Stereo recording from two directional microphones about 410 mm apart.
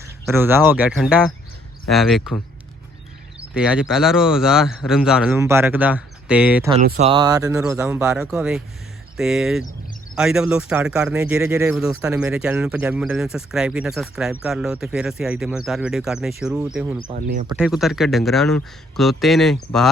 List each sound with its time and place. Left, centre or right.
0.0 s speech: centre
3.5 s speech: centre
17.1 s speech: centre
17.4 s speech: centre